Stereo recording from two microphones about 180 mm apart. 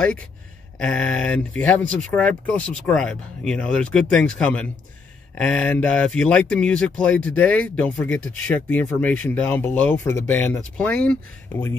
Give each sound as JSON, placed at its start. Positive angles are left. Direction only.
{"t": 0.7, "sound": "speech", "side_deg": 5}